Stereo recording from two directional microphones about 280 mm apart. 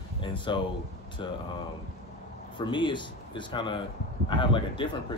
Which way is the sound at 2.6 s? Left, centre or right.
Centre.